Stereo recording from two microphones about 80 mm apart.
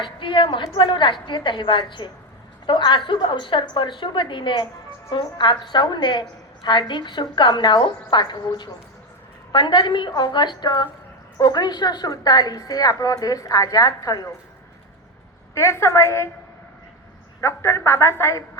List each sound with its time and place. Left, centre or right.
0.0 s a woman's voice: left
5.1 s a woman's voice: left
15.5 s a woman's voice: left
17.4 s a woman's voice: left